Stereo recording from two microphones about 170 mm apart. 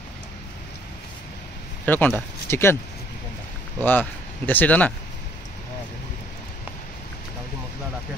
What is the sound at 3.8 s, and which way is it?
Speech, 10° left (ahead or behind).